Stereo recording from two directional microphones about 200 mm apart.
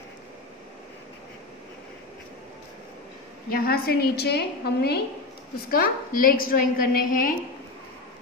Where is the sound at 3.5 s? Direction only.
50° left (ahead or behind).